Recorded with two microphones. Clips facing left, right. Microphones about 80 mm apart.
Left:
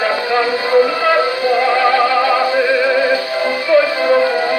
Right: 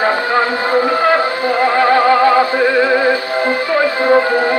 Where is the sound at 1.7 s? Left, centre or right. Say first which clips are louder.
Right 5 dB; right.